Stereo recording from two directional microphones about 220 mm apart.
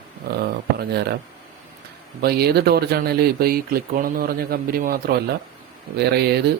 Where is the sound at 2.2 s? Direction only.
45° right (ahead or behind).